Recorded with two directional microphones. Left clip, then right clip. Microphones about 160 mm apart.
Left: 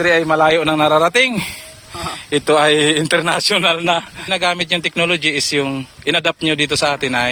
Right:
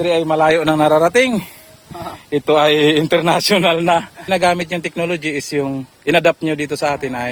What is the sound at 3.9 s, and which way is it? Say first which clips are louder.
A man's voice: right 2 dB; 20° right (ahead or behind).